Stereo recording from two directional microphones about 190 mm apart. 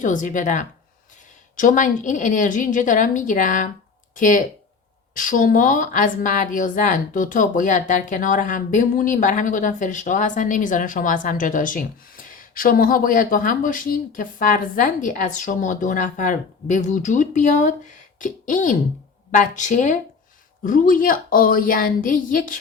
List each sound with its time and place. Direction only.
0.0 s a woman's voice: 45° left (ahead or behind)